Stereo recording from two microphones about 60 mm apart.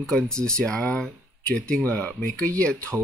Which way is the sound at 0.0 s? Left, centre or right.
Centre.